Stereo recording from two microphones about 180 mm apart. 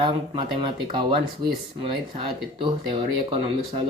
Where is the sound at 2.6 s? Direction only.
30° right (ahead or behind).